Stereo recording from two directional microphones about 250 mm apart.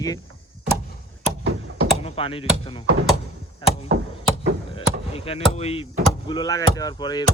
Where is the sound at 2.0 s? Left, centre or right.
Left.